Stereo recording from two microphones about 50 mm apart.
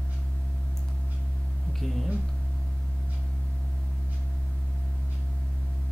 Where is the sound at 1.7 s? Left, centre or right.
Centre.